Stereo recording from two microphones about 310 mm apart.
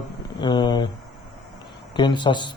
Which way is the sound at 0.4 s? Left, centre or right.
Centre.